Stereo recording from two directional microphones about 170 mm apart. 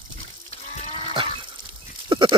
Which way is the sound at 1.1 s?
30° right (ahead or behind).